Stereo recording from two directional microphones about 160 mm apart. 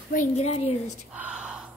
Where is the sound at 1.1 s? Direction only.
5° right (ahead or behind).